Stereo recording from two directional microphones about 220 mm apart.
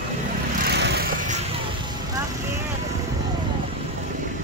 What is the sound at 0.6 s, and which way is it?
Vehicle, 50° right (ahead or behind).